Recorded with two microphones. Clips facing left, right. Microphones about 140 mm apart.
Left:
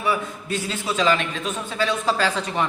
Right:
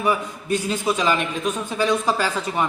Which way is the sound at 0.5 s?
15° right (ahead or behind).